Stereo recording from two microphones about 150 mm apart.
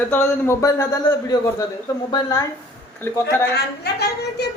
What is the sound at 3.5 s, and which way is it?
Speech, 90° left.